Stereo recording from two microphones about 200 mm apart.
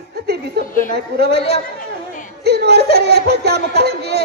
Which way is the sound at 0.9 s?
55° right (ahead or behind).